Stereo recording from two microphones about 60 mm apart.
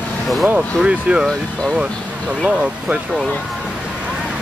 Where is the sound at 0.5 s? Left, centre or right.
Centre.